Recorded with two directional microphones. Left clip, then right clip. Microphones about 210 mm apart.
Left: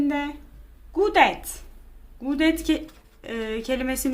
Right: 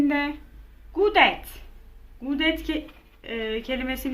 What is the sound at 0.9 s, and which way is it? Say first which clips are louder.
A woman's voice: even; 20° left (ahead or behind).